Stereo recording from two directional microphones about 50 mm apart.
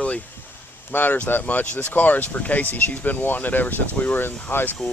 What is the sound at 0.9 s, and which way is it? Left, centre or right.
Speech, left.